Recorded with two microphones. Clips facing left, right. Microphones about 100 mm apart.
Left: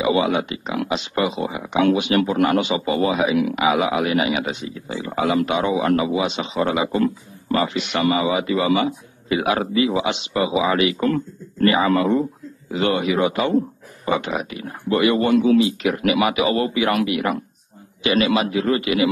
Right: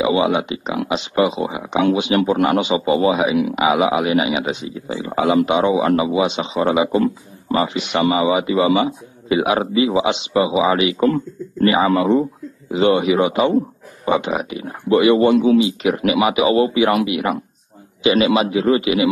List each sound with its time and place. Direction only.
0.0 s speech: 20° right (ahead or behind)